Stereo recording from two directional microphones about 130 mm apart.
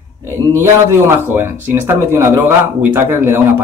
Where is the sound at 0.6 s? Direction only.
20° right (ahead or behind).